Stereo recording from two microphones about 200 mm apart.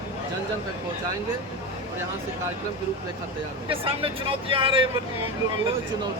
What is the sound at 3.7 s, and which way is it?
Speech, 25° right (ahead or behind).